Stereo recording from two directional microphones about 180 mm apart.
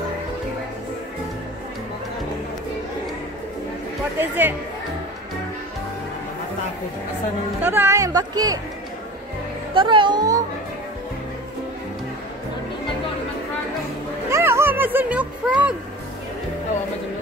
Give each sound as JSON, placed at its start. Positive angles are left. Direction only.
{"t": 4.2, "sound": "speech", "side_deg": -10}
{"t": 7.6, "sound": "speech", "side_deg": -10}
{"t": 9.8, "sound": "speech", "side_deg": -25}
{"t": 14.3, "sound": "music", "side_deg": -15}